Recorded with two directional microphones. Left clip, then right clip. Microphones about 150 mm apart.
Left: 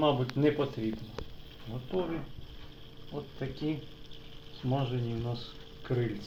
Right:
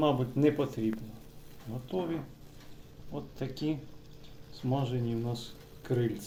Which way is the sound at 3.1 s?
10° right (ahead or behind).